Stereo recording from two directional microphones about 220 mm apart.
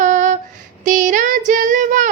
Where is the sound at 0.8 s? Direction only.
35° right (ahead or behind).